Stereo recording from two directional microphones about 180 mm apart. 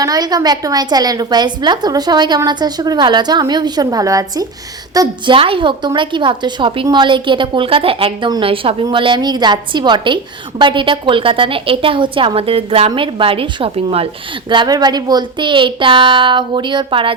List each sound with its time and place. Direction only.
0.0 s a woman's voice: 20° right (ahead or behind)